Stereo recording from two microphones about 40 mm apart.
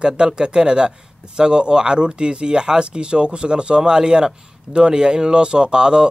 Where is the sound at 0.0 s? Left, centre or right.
Right.